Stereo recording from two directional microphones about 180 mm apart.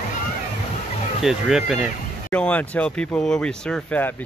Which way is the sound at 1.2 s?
5° right (ahead or behind).